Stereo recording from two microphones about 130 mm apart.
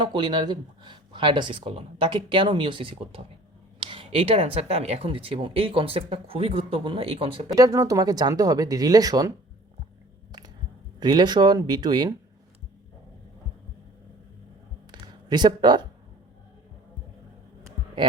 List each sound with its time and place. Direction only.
0.0 s speech: 35° right (ahead or behind)
7.5 s speech: 25° right (ahead or behind)
11.0 s speech: 35° right (ahead or behind)
15.0 s speech: 35° right (ahead or behind)